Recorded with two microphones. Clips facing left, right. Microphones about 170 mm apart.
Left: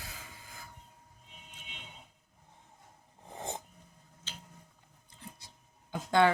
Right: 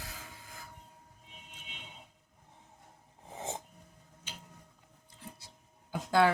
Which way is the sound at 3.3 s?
Centre (ahead or behind).